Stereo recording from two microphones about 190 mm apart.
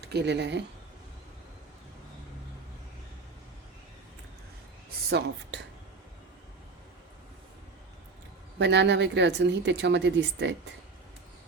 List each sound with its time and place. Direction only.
0.0 s speech: 60° right (ahead or behind)
8.5 s speech: 65° right (ahead or behind)